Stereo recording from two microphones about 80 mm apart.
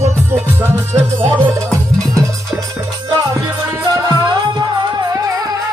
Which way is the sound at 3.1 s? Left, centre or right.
Right.